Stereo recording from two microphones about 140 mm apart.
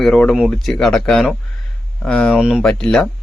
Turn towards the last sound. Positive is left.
turn(degrees=5)  # may be behind; listen again after turning